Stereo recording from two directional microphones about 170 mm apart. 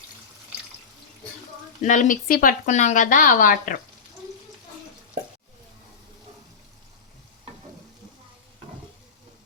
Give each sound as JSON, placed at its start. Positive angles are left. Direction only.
{"t": 1.8, "sound": "a woman's voice", "side_deg": 50}